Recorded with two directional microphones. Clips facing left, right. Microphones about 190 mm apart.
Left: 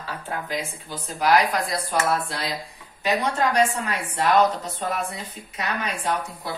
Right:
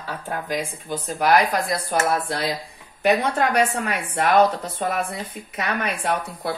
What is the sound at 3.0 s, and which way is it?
A woman's voice, 60° right (ahead or behind).